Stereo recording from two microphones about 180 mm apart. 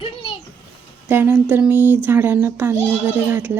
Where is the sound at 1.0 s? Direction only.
10° right (ahead or behind).